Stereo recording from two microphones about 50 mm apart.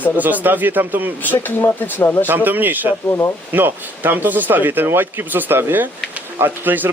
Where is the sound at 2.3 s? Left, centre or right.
Right.